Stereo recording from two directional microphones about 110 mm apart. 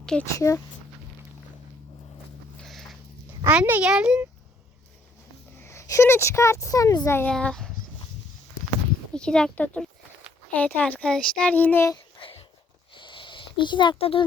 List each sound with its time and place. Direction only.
0.0 s speech: 5° left (ahead or behind)
0.3 s speech: 30° left (ahead or behind)
2.6 s a sound: centre (ahead or behind)
3.4 s speech: 15° right (ahead or behind)
5.5 s speech: 25° left (ahead or behind)
7.3 s a child's voice: 10° left (ahead or behind)
9.1 s a child's voice: 5° left (ahead or behind)
12.2 s a sound: 60° left (ahead or behind)
12.9 s a sound: 50° left (ahead or behind)